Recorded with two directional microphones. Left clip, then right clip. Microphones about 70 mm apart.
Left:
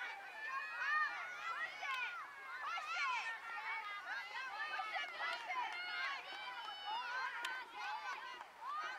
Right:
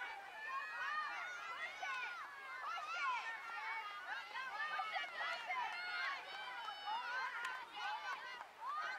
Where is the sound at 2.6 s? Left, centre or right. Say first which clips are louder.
Left 1 dB; left.